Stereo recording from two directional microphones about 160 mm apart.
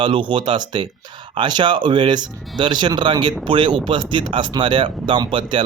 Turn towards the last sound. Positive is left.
turn(degrees=-30)  # may be behind; listen again after turning